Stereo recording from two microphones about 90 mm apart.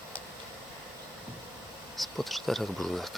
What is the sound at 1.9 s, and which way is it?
Speech, centre (ahead or behind).